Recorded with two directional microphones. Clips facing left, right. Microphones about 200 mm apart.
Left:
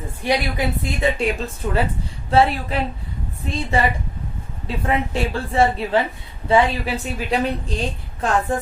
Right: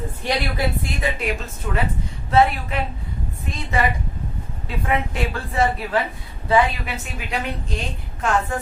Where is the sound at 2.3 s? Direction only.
30° left (ahead or behind).